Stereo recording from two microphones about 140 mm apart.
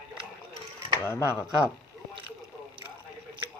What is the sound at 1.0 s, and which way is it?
Speech, 15° left (ahead or behind).